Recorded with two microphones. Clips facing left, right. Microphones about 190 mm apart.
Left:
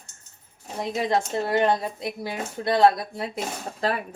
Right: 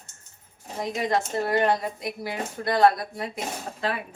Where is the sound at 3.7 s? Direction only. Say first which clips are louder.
Left 4 dB; 40° left (ahead or behind).